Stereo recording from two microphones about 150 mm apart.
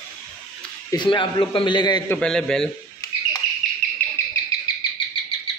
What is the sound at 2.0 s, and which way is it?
Speech, 5° left (ahead or behind).